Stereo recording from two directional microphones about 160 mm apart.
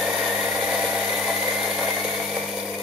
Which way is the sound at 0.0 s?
5° right (ahead or behind).